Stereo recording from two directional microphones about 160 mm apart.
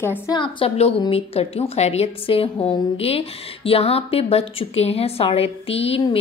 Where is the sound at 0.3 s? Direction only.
30° left (ahead or behind).